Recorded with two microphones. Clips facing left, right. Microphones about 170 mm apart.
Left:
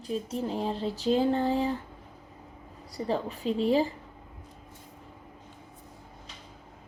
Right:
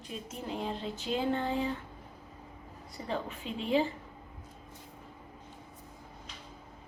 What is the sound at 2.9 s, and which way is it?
A woman's voice, 35° left (ahead or behind).